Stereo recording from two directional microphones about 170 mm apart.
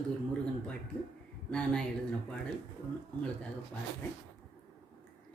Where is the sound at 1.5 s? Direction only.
5° left (ahead or behind).